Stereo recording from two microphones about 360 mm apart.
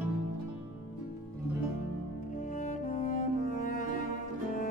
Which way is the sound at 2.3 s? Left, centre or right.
Left.